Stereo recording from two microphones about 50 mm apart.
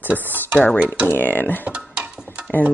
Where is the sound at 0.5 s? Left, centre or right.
Left.